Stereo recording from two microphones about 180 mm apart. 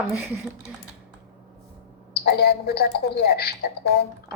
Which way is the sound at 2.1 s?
60° left (ahead or behind).